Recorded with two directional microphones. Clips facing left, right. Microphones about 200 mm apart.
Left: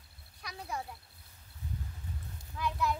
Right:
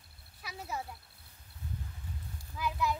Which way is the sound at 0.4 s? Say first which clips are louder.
Even; 5° right (ahead or behind).